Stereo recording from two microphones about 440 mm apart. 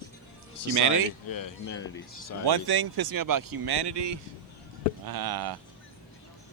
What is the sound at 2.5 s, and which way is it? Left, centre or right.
Speech, right.